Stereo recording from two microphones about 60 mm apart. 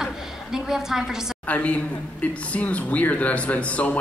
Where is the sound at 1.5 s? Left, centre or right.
Left.